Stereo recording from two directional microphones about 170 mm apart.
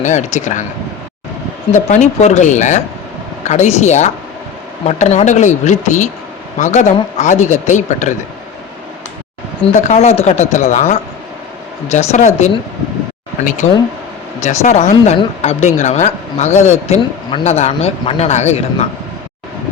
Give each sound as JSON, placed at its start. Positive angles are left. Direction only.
{"t": 0.0, "sound": "a man's voice", "side_deg": 45}
{"t": 1.7, "sound": "a man's voice", "side_deg": 45}
{"t": 9.7, "sound": "speech", "side_deg": 45}
{"t": 13.4, "sound": "a man's voice", "side_deg": 50}
{"t": 14.4, "sound": "a man's voice", "side_deg": 40}